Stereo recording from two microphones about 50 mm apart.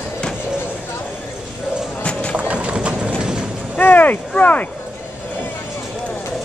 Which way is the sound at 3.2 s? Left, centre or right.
Centre.